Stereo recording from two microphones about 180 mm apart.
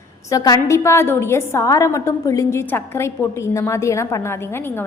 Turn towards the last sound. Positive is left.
turn(degrees=15)  # may be behind; listen again after turning